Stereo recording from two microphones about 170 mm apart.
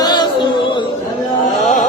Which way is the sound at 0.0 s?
25° left (ahead or behind).